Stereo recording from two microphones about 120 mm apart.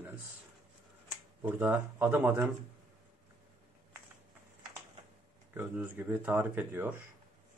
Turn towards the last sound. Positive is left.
turn(degrees=-15)  # may be behind; listen again after turning